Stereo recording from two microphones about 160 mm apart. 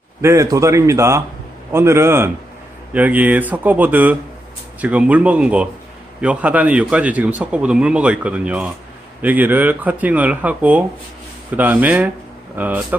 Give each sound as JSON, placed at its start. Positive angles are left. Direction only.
{"t": 0.2, "sound": "speech", "side_deg": -15}